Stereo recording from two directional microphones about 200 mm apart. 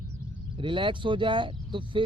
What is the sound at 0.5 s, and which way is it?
Speech, 25° right (ahead or behind).